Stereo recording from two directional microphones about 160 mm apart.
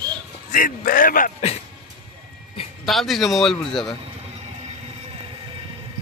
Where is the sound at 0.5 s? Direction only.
60° left (ahead or behind).